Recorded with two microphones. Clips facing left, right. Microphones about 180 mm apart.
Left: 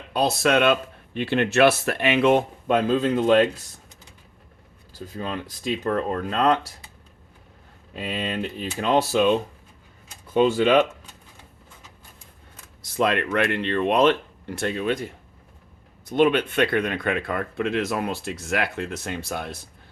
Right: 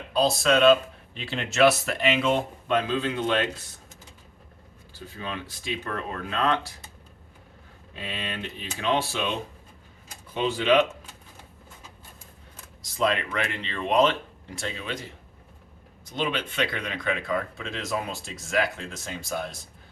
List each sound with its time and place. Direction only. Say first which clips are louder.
0.1 s speech: left 2 dB; 65° left (ahead or behind)
2.6 s speech: left 5 dB; 45° left (ahead or behind)
4.9 s speech: left 5 dB; 40° left (ahead or behind)
8.1 s speech: left 7 dB; 40° left (ahead or behind)
12.8 s speech: left 3 dB; 60° left (ahead or behind)